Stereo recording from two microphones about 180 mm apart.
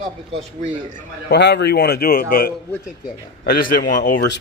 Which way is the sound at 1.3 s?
70° left (ahead or behind).